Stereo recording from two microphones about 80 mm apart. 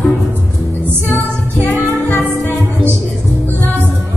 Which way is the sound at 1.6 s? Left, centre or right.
Left.